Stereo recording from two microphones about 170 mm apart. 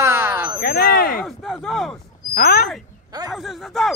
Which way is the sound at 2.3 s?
65° left (ahead or behind).